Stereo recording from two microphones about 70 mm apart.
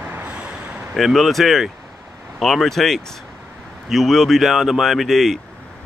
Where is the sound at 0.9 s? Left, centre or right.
Centre.